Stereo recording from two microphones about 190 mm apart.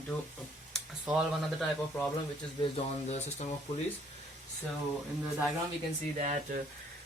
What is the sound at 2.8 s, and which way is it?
Speech, 35° left (ahead or behind).